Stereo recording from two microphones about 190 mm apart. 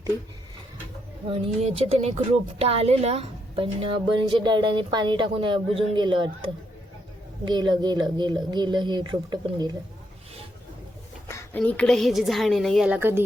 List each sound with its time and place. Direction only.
1.3 s a woman's voice: 35° right (ahead or behind)
11.3 s a woman's voice: 10° left (ahead or behind); by 13.2 s 10° right (ahead or behind)